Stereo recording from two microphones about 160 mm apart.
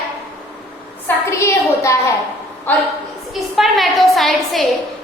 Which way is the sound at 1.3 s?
20° left (ahead or behind).